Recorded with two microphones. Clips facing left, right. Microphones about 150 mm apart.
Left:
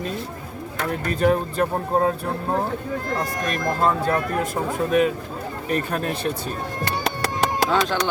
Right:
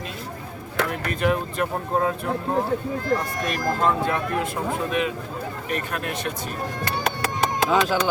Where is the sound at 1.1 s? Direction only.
35° left (ahead or behind).